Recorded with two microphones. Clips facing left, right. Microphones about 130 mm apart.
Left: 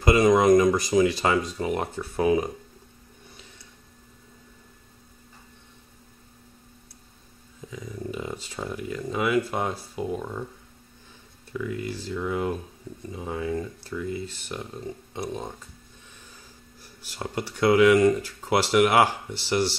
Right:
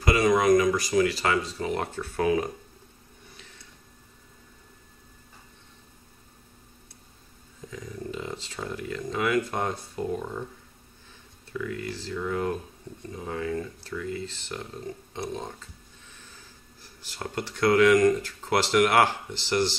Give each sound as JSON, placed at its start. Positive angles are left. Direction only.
{"t": 0.0, "sound": "speech", "side_deg": 20}
{"t": 7.7, "sound": "speech", "side_deg": 10}
{"t": 11.5, "sound": "speech", "side_deg": 10}
{"t": 16.8, "sound": "speech", "side_deg": 10}